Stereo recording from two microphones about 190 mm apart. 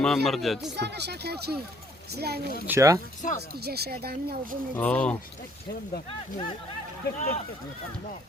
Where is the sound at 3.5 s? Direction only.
55° right (ahead or behind).